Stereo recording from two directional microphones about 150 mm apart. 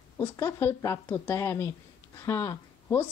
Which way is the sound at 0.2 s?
15° left (ahead or behind).